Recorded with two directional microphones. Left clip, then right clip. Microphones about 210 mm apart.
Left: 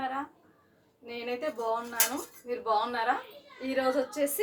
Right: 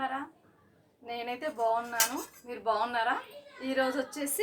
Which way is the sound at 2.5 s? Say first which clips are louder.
Left 2 dB; 20° right (ahead or behind).